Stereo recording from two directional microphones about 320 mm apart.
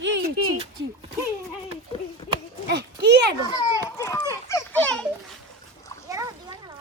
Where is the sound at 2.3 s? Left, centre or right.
Right.